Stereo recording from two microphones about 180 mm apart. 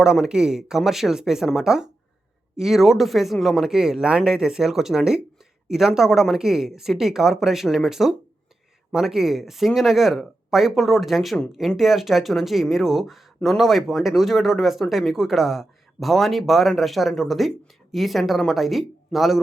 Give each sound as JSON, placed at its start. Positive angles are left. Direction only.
{"t": 0.0, "sound": "speech", "side_deg": -5}